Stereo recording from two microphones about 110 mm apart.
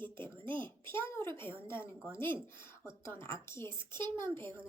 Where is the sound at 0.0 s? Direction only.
20° left (ahead or behind).